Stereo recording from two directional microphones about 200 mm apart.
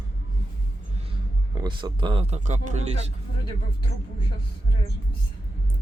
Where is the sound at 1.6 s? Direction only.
20° right (ahead or behind).